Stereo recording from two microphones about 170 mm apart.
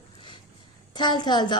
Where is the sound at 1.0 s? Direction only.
25° left (ahead or behind).